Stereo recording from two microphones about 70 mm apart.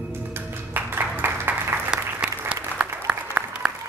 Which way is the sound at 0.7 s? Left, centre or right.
Right.